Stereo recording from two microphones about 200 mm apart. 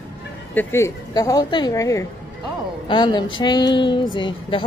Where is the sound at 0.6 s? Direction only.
10° left (ahead or behind).